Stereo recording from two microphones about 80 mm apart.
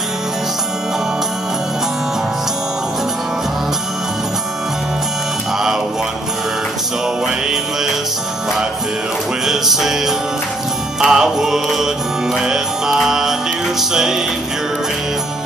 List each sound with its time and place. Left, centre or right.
7.2 s music: centre
9.5 s music: centre